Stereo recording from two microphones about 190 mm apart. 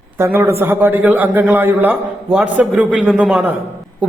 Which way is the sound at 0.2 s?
10° right (ahead or behind).